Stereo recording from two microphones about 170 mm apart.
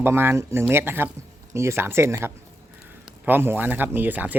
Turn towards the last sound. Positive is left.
turn(degrees=-10)  # may be behind; listen again after turning